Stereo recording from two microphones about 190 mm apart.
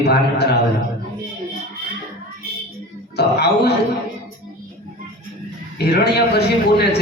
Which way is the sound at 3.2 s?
60° left (ahead or behind).